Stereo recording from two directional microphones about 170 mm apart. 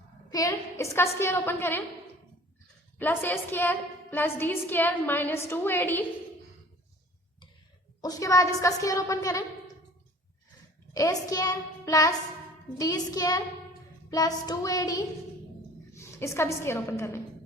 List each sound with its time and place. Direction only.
0.3 s a woman's voice: 20° left (ahead or behind)
3.0 s a woman's voice: 10° left (ahead or behind)
8.0 s a woman's voice: 20° left (ahead or behind)
10.9 s a woman's voice: 20° left (ahead or behind)